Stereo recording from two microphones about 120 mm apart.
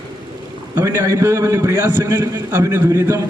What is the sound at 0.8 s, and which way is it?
A man's voice, 20° right (ahead or behind).